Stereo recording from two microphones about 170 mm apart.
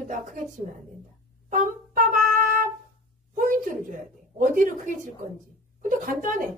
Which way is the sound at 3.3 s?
50° right (ahead or behind).